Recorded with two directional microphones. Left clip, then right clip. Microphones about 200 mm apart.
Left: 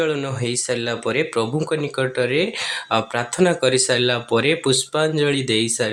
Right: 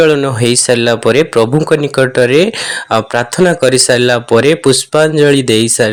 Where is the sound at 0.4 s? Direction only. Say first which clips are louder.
Right 13 dB; 40° right (ahead or behind).